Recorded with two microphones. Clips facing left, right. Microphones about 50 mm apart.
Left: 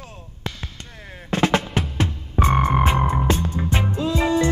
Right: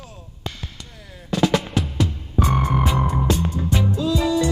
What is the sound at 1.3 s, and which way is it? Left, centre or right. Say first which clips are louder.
Music: even; left.